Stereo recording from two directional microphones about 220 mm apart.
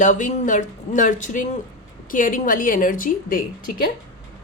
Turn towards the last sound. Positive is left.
turn(degrees=40)  # may be behind; listen again after turning